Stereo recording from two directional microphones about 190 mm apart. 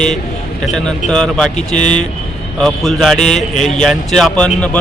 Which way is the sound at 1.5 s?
40° left (ahead or behind).